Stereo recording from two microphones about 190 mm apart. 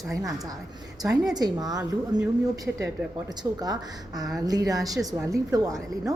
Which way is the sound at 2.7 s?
10° right (ahead or behind).